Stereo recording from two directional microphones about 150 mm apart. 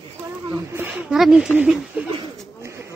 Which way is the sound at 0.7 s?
10° right (ahead or behind).